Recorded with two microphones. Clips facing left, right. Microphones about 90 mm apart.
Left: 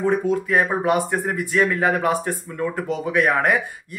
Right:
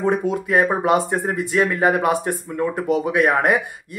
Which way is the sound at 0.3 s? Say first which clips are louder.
Right 1 dB; 15° right (ahead or behind).